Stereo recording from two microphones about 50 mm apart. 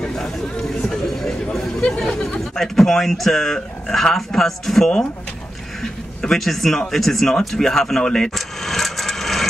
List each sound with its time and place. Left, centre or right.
0.0 s a sound: centre
1.8 s chatter: centre
2.5 s a man's voice: centre
8.4 s vehicle: centre